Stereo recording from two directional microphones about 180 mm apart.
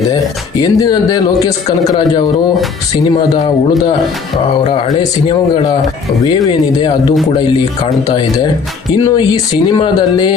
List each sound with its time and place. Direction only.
0.6 s speech: 20° left (ahead or behind)
6.2 s speech: 25° left (ahead or behind)